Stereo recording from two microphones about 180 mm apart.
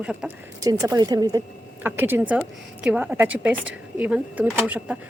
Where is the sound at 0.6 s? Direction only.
20° right (ahead or behind).